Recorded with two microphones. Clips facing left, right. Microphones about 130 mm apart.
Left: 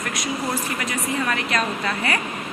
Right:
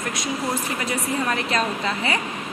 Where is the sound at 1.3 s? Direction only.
25° right (ahead or behind).